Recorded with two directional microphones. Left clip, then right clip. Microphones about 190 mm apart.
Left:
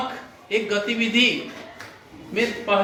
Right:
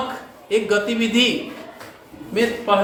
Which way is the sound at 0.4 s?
25° right (ahead or behind).